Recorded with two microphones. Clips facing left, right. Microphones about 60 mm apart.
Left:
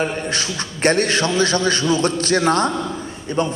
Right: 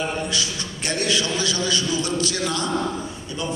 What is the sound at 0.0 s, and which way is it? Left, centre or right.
A man's voice, left.